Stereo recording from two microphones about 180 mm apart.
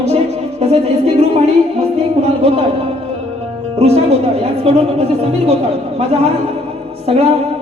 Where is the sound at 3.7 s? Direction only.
35° right (ahead or behind).